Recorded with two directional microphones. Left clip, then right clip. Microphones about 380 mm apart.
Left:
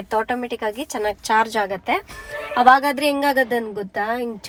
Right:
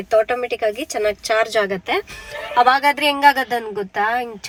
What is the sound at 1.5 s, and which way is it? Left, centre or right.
Speech, left.